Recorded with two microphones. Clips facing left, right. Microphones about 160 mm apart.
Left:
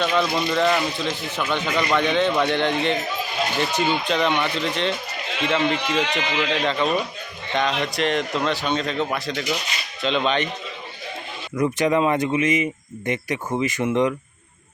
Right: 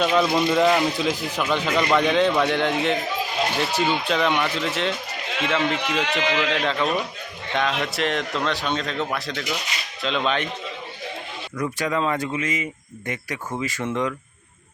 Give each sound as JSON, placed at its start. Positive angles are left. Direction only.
{"t": 0.0, "sound": "a man's voice", "side_deg": -5}
{"t": 11.5, "sound": "speech", "side_deg": 20}